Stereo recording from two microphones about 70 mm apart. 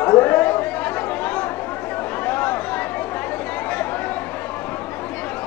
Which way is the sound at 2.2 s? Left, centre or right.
Left.